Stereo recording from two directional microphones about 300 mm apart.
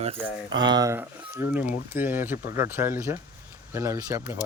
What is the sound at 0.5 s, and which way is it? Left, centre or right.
Speech, centre.